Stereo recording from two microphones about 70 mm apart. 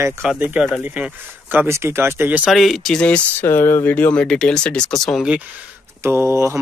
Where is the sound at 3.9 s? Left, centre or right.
Centre.